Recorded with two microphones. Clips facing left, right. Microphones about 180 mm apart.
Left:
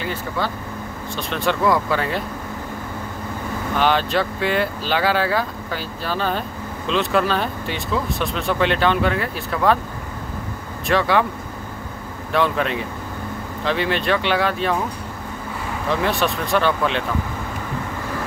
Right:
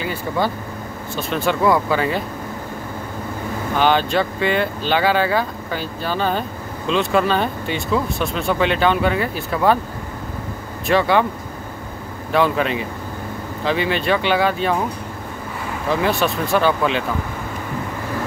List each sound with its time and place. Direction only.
0.0 s speech: 10° right (ahead or behind)
3.7 s speech: centre (ahead or behind)
10.9 s speech: centre (ahead or behind)
12.3 s speech: centre (ahead or behind)
15.9 s speech: centre (ahead or behind)